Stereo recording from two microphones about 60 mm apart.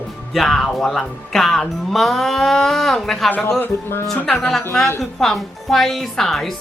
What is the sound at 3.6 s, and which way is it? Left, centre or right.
Music, left.